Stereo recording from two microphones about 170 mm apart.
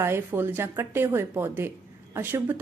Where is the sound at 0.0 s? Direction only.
15° right (ahead or behind).